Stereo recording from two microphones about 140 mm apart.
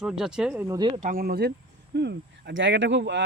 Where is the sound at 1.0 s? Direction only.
85° right.